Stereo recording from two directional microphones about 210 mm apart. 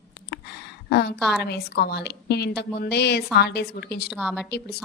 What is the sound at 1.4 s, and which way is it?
A woman's voice, 50° left (ahead or behind).